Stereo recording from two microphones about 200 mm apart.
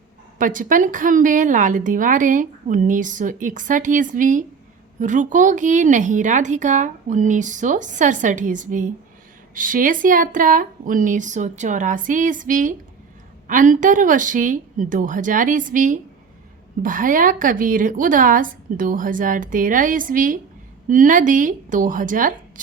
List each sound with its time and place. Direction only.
0.3 s a woman's voice: 40° right (ahead or behind)